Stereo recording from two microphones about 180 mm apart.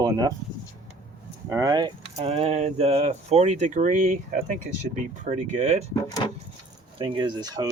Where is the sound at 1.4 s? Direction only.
15° right (ahead or behind).